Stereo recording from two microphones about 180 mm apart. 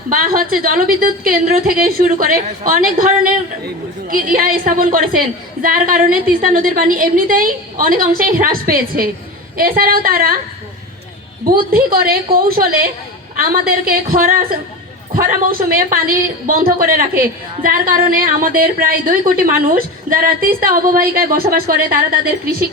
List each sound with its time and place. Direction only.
0.1 s a woman's voice: 50° right (ahead or behind)
11.4 s a woman's voice: 55° right (ahead or behind)